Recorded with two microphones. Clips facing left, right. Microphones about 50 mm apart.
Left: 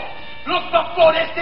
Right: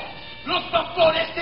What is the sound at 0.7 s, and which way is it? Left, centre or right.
Speech, centre.